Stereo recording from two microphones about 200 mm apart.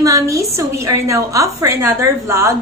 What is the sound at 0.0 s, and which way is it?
A woman's voice, 15° right (ahead or behind).